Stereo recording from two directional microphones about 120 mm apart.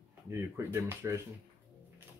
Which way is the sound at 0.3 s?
20° right (ahead or behind).